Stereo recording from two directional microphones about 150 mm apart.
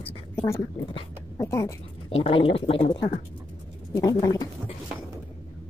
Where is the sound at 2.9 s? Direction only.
25° left (ahead or behind).